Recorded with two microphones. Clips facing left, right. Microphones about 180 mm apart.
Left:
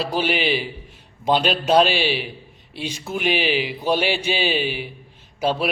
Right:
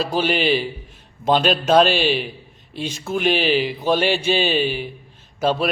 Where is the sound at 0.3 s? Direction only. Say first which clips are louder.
Right 3 dB; 45° right (ahead or behind).